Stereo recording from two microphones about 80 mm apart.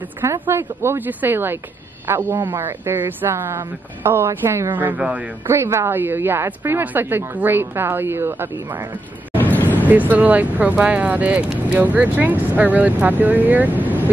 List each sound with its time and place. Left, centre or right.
0.2 s speech: right
4.7 s speech: centre
5.5 s speech: right
9.4 s vehicle: left
9.8 s speech: right